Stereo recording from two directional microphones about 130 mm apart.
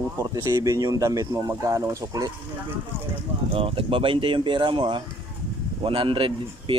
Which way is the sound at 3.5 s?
45° right (ahead or behind).